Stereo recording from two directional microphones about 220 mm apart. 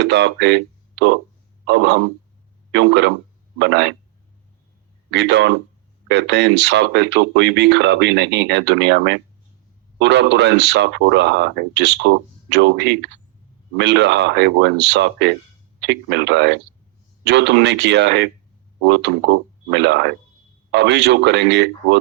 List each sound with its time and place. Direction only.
0.0 s speech: 50° right (ahead or behind)
5.1 s speech: 50° right (ahead or behind)